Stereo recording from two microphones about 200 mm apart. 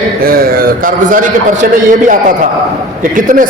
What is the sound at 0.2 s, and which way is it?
A man's voice, 45° right (ahead or behind).